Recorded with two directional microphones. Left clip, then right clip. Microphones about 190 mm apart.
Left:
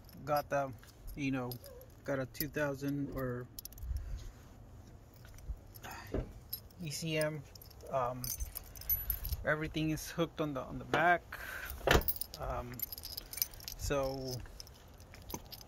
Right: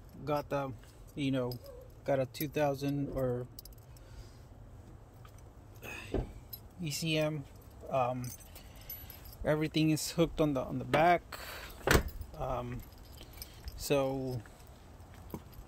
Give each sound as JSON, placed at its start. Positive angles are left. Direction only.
{"t": 0.2, "sound": "a man's voice", "side_deg": 5}
{"t": 5.9, "sound": "vehicle", "side_deg": -10}
{"t": 6.8, "sound": "speech", "side_deg": -10}
{"t": 9.4, "sound": "speech", "side_deg": -35}
{"t": 13.0, "sound": "keys jangling", "side_deg": 75}
{"t": 13.7, "sound": "speech", "side_deg": -25}